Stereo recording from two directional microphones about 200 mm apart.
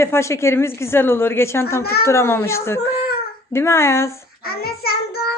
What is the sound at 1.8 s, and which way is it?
Speech, 50° left (ahead or behind).